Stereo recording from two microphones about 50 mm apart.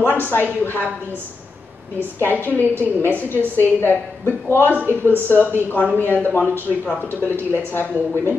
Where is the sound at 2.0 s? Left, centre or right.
Left.